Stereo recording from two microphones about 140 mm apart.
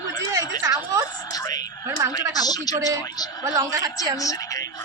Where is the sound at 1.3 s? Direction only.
25° left (ahead or behind).